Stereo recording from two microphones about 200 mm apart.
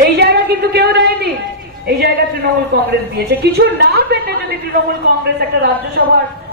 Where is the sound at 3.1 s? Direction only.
55° right (ahead or behind).